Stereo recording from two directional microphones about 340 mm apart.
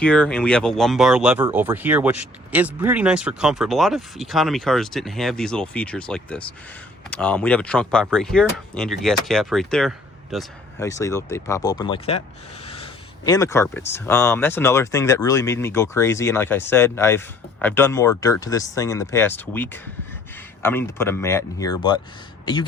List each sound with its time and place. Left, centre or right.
0.0 s speech: centre